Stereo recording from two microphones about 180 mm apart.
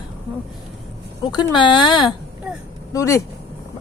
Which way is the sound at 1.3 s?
25° left (ahead or behind).